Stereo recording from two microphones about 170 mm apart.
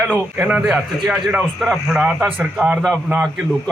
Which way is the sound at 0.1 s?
10° right (ahead or behind).